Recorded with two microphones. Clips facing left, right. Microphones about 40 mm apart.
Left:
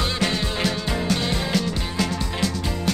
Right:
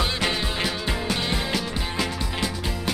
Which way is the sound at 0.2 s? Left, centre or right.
Centre.